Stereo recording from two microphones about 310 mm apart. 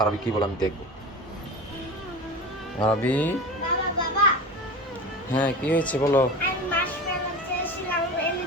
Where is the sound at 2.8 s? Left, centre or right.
Centre.